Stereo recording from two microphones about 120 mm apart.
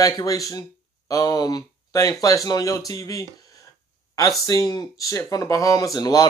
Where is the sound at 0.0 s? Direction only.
30° left (ahead or behind).